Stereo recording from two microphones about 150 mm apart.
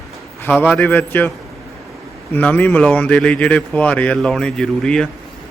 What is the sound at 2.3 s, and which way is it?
A man's voice, 10° left (ahead or behind).